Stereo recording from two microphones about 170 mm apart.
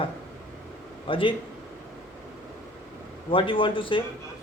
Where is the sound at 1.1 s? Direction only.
30° left (ahead or behind).